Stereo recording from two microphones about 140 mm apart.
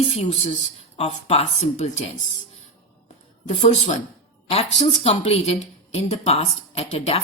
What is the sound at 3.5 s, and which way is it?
Speech, 55° left (ahead or behind).